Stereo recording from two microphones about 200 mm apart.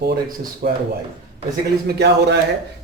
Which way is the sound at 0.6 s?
50° right (ahead or behind).